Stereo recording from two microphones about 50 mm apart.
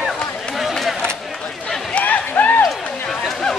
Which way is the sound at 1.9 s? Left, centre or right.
Left.